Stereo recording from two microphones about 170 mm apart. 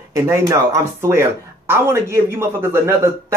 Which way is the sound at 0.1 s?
20° right (ahead or behind).